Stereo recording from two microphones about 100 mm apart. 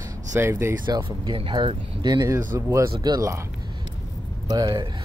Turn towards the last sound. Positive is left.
turn(degrees=-40)  # may be behind; listen again after turning